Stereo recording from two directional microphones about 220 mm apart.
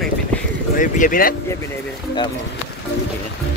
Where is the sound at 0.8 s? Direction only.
35° left (ahead or behind).